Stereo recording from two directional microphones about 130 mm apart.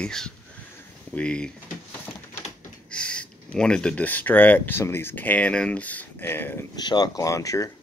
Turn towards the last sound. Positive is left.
turn(degrees=25)  # may be behind; listen again after turning